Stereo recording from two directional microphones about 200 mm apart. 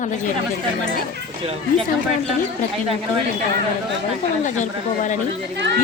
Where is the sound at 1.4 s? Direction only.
30° right (ahead or behind).